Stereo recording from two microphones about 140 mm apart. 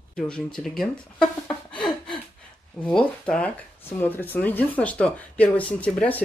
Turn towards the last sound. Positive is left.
turn(degrees=10)  # may be behind; listen again after turning